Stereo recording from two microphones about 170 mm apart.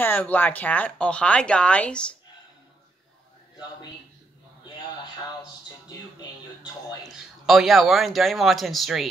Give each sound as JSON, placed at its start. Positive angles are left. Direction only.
{"t": 0.0, "sound": "speech", "side_deg": 10}
{"t": 6.6, "sound": "speech", "side_deg": 25}
{"t": 7.2, "sound": "a man's voice", "side_deg": 0}